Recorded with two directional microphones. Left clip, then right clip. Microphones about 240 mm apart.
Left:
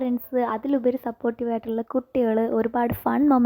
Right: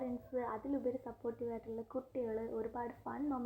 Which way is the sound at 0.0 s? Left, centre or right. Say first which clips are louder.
Left 16 dB; left.